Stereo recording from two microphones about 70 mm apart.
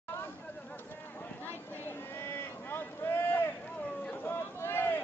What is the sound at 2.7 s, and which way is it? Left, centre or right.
Boat, left.